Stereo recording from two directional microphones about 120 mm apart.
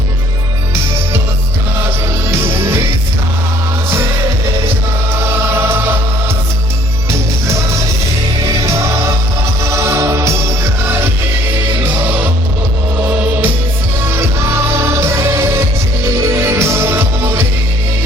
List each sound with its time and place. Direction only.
2.3 s music: 20° right (ahead or behind)
5.2 s music: 20° right (ahead or behind)
9.6 s music: 25° right (ahead or behind)
14.1 s music: 20° right (ahead or behind)